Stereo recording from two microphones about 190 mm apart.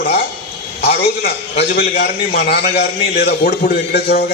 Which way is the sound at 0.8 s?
55° left (ahead or behind).